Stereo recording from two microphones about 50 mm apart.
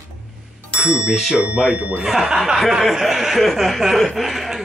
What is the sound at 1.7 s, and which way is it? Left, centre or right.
Speech, right.